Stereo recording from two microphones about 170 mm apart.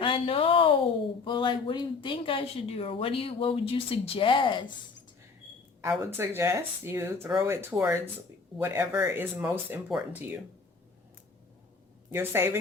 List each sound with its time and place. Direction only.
0.0 s speech: 30° left (ahead or behind)
6.0 s speech: 15° right (ahead or behind)
12.1 s speech: 15° right (ahead or behind)